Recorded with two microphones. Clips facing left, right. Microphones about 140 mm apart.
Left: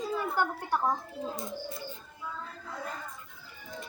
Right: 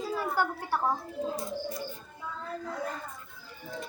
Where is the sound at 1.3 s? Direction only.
25° left (ahead or behind).